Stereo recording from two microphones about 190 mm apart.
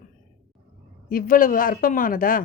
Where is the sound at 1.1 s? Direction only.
45° left (ahead or behind).